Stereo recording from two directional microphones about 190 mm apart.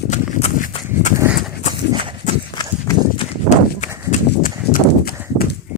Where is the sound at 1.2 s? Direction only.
5° right (ahead or behind).